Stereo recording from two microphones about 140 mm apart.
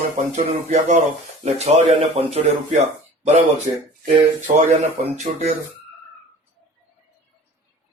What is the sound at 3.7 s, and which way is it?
Speech, 40° right (ahead or behind).